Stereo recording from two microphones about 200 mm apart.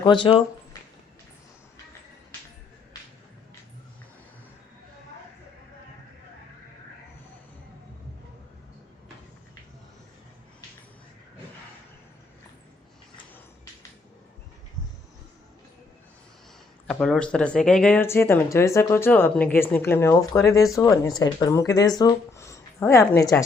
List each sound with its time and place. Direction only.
0.0 s speech: 25° left (ahead or behind)
16.8 s speech: 5° left (ahead or behind)